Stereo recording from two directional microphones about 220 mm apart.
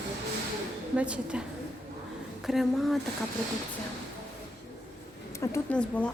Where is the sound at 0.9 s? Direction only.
5° right (ahead or behind).